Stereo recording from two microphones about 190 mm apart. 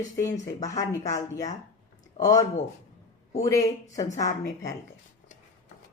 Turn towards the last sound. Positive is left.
turn(degrees=15)  # may be behind; listen again after turning